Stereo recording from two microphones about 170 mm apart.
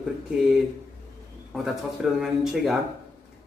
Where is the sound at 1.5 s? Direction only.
Centre (ahead or behind).